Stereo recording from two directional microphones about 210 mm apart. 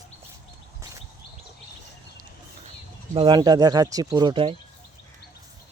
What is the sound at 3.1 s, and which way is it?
Speech, 20° right (ahead or behind).